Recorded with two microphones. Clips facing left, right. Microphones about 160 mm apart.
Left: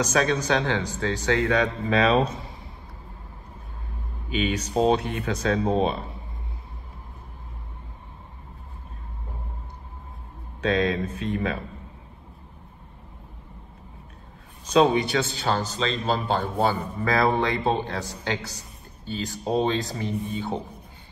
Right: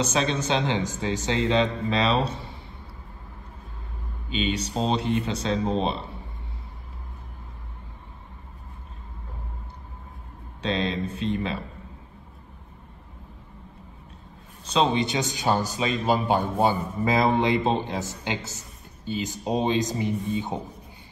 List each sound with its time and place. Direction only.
0.0 s speech: 25° right (ahead or behind)
4.3 s speech: 30° right (ahead or behind)
10.6 s speech: 30° right (ahead or behind)
14.7 s speech: 30° right (ahead or behind)
19.0 s speech: 15° right (ahead or behind)